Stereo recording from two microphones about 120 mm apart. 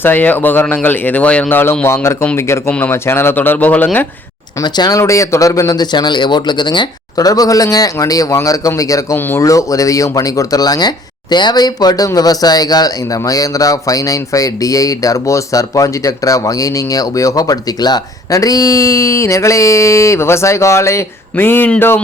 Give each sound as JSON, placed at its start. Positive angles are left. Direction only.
{"t": 0.0, "sound": "speech", "side_deg": 15}
{"t": 4.6, "sound": "speech", "side_deg": 30}